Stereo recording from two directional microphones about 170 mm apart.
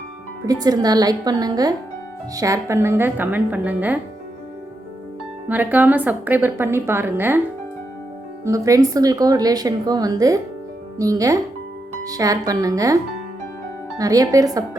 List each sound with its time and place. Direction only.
0.4 s a woman's voice: 20° right (ahead or behind)
5.5 s a woman's voice: 10° right (ahead or behind)
8.4 s a woman's voice: 20° right (ahead or behind)
14.0 s a woman's voice: 20° right (ahead or behind)